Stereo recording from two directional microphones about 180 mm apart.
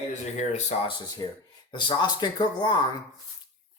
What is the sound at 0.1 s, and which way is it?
Speech, 40° left (ahead or behind).